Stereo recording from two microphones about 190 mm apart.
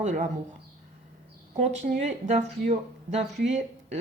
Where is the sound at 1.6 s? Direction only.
40° right (ahead or behind).